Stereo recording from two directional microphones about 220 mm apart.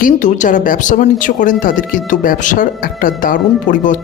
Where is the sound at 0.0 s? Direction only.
35° left (ahead or behind).